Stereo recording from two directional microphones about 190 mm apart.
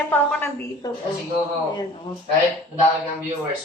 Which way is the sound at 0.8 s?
20° left (ahead or behind).